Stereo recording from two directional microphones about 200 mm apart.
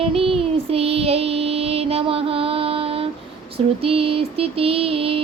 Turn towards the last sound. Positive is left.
turn(degrees=-30)  # may be behind; listen again after turning